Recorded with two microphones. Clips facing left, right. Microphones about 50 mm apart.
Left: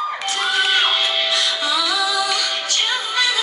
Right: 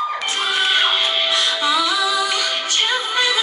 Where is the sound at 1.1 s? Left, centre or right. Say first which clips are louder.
Right 1 dB; right.